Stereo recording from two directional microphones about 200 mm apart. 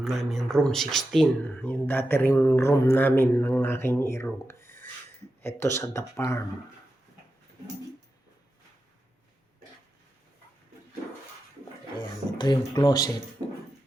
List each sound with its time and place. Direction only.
0.0 s speech: centre (ahead or behind)
11.9 s speech: 20° left (ahead or behind)